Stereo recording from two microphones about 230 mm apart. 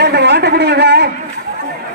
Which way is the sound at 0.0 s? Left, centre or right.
Right.